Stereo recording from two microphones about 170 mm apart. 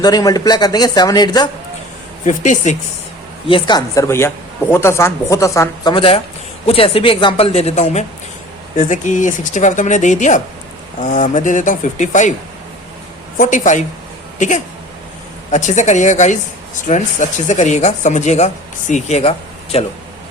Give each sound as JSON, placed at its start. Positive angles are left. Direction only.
{"t": 0.0, "sound": "speech", "side_deg": 20}
{"t": 2.2, "sound": "speech", "side_deg": 45}
{"t": 3.4, "sound": "speech", "side_deg": 30}
{"t": 13.3, "sound": "speech", "side_deg": 50}